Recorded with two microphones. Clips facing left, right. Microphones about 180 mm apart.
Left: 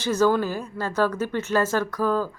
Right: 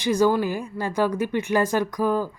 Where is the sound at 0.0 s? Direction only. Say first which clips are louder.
Right 1 dB; 10° right (ahead or behind).